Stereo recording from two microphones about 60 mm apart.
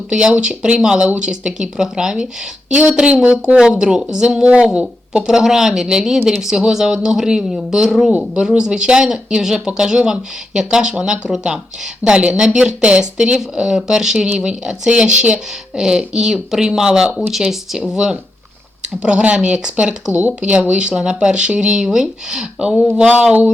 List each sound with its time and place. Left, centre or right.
0.1 s speech: centre